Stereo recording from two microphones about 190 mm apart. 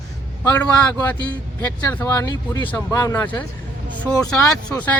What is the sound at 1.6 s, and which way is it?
Speech, 10° left (ahead or behind).